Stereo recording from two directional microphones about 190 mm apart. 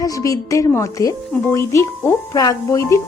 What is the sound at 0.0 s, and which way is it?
A woman's voice, 15° left (ahead or behind).